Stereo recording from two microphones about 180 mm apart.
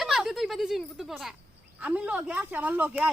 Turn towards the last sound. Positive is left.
turn(degrees=-10)  # may be behind; listen again after turning